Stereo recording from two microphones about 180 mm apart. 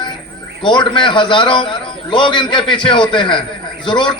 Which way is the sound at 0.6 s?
25° left (ahead or behind).